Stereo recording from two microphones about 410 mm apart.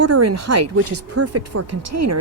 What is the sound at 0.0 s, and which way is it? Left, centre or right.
Speech, right.